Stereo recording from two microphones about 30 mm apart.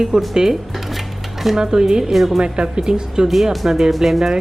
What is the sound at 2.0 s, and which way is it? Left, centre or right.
Speech, centre.